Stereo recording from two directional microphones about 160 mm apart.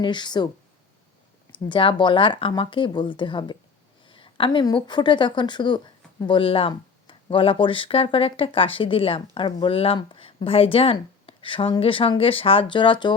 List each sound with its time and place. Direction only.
0.0 s speech: 30° left (ahead or behind)
1.5 s a woman's voice: 30° left (ahead or behind)